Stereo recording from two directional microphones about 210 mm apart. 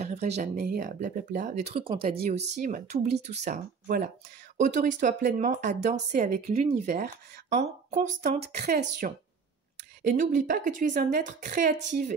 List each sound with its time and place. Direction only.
0.0 s speech: 30° right (ahead or behind)
8.4 s speech: 50° right (ahead or behind)
10.0 s speech: 40° right (ahead or behind)